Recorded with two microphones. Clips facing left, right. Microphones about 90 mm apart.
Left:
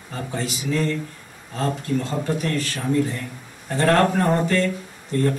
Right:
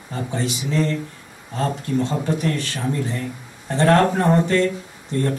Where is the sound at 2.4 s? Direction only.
25° right (ahead or behind).